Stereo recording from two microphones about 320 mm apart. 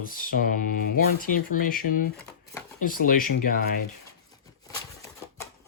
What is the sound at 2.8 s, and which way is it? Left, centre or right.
Mantra, left.